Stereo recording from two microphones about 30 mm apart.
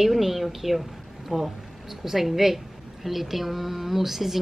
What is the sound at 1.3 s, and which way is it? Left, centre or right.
A woman's voice, centre.